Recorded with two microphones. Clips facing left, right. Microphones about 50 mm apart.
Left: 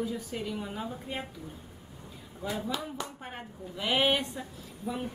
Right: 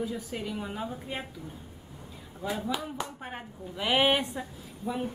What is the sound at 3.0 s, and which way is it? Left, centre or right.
Speech, centre.